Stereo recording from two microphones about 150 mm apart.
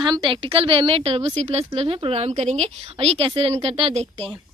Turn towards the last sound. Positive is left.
turn(degrees=-35)  # may be behind; listen again after turning